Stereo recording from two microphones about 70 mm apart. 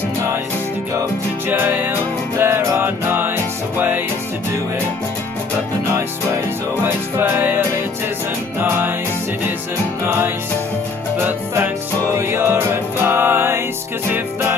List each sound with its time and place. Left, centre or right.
1.5 s music: right
6.8 s music: right
10.0 s music: right